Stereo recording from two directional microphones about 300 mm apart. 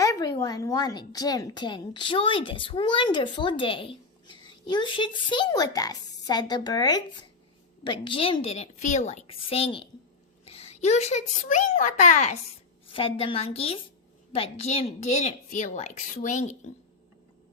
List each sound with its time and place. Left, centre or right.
0.0 s a woman's voice: centre